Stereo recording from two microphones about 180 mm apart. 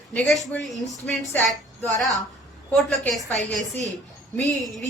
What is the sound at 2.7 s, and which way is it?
Speech, 10° left (ahead or behind).